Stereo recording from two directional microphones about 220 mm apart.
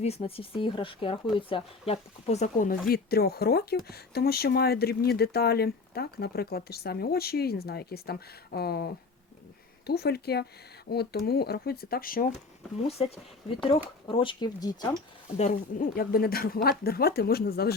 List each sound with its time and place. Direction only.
0.0 s speech: 25° left (ahead or behind)
2.9 s speech: 45° left (ahead or behind)
12.9 s speech: 30° left (ahead or behind)
15.4 s speech: 35° left (ahead or behind)